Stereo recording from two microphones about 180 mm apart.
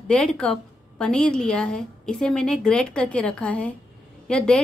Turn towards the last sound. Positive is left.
turn(degrees=5)  # may be behind; listen again after turning